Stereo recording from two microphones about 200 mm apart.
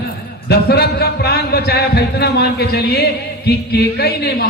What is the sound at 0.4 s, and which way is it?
Speech, 50° left (ahead or behind).